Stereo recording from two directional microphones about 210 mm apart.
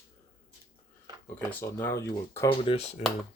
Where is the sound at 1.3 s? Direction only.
10° left (ahead or behind).